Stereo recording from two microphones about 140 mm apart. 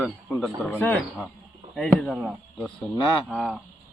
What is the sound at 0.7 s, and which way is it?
A man's voice, 15° left (ahead or behind).